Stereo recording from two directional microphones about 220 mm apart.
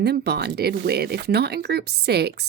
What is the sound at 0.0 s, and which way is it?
A woman's voice, 45° right (ahead or behind).